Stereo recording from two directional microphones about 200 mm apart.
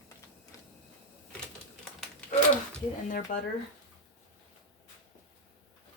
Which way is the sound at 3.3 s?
40° left (ahead or behind).